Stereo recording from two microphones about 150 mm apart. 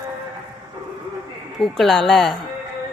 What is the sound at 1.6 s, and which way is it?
Speech, centre (ahead or behind).